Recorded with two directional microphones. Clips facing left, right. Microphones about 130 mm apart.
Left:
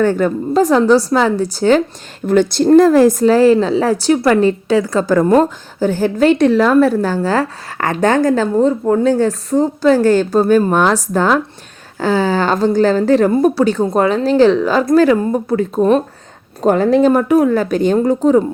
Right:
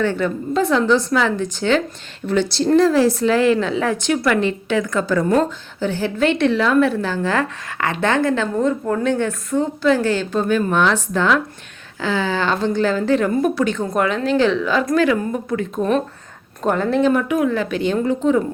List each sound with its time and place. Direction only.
0.0 s a woman's voice: 45° left (ahead or behind)